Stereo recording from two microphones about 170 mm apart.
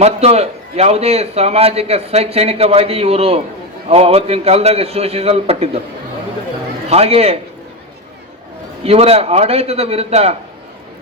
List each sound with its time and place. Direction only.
0.0 s a man's voice: 40° right (ahead or behind)
6.9 s a man's voice: 35° right (ahead or behind)
8.8 s a man's voice: 35° right (ahead or behind)